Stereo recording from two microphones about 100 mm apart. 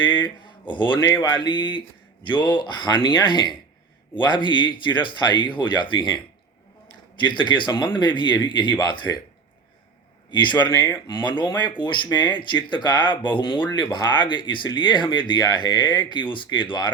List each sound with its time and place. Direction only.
0.0 s speech: 50° left (ahead or behind)
11.0 s speech: 45° left (ahead or behind)